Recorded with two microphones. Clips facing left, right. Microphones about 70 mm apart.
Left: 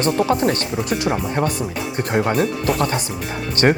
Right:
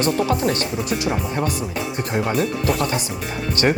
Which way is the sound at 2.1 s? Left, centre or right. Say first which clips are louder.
Left 3 dB; left.